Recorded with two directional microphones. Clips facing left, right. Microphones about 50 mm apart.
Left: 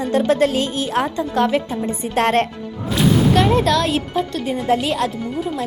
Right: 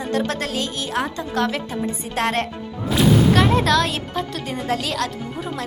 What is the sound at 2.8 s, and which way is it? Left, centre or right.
Speech, centre.